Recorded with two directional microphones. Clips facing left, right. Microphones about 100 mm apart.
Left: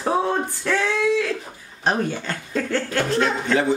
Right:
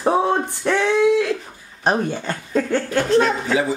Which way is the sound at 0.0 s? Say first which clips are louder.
Right 3 dB; 20° right (ahead or behind).